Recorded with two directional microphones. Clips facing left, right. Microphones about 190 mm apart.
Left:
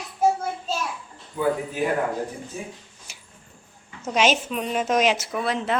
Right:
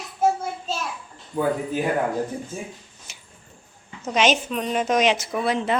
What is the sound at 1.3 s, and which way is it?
Speech, 45° right (ahead or behind).